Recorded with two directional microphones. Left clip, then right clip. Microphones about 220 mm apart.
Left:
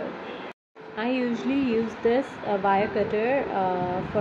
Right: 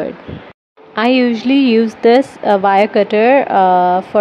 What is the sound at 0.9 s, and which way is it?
A woman's voice, 40° right (ahead or behind).